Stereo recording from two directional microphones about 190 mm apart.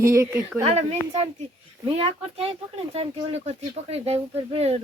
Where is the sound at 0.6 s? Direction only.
35° right (ahead or behind).